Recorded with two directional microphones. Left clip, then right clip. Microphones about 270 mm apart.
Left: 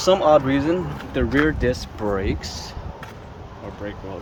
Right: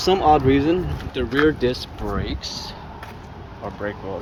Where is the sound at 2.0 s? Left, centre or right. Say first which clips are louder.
Left 4 dB; left.